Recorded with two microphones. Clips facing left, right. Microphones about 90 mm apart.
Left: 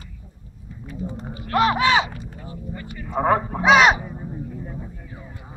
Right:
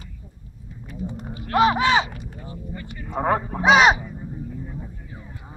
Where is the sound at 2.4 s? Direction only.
Centre (ahead or behind).